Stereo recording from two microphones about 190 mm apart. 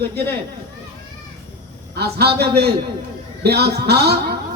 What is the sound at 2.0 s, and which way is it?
Speech, 55° right (ahead or behind).